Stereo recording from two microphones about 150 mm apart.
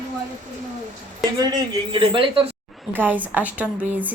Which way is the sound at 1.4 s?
25° right (ahead or behind).